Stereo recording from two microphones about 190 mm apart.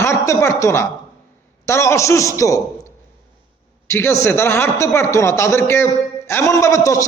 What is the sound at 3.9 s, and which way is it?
A man's voice, 15° left (ahead or behind).